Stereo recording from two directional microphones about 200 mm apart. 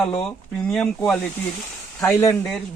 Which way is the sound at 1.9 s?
15° left (ahead or behind).